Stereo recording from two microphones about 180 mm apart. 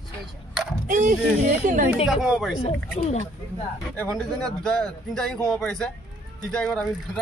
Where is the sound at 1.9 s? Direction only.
5° right (ahead or behind).